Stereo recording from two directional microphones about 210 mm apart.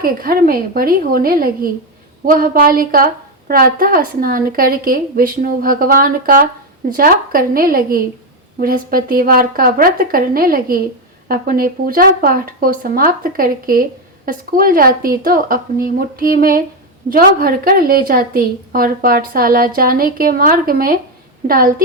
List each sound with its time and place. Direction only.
0.0 s a woman's voice: 45° right (ahead or behind)